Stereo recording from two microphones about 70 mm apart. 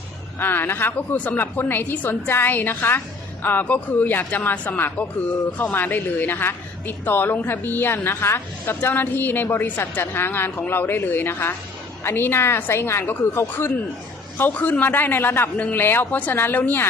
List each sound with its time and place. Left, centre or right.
0.3 s a woman's voice: left